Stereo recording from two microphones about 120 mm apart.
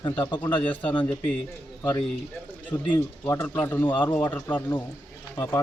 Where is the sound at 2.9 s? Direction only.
20° left (ahead or behind).